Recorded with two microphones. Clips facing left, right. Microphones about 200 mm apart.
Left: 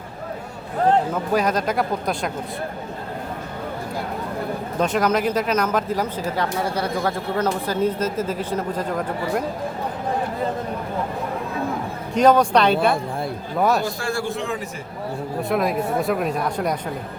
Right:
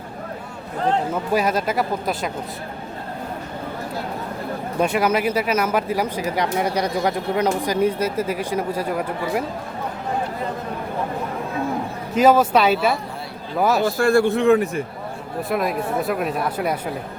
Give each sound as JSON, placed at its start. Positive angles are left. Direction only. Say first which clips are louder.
{"t": 1.3, "sound": "speech", "louder": "right 1 dB", "side_deg": -5}
{"t": 4.8, "sound": "speech", "louder": "right 1 dB", "side_deg": -10}
{"t": 12.1, "sound": "speech", "louder": "even", "side_deg": -5}
{"t": 13.8, "sound": "a man's voice", "louder": "right 8 dB", "side_deg": -60}
{"t": 15.4, "sound": "speech", "louder": "left 1 dB", "side_deg": 0}